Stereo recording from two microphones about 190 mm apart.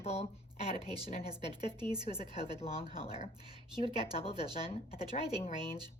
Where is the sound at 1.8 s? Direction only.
20° right (ahead or behind).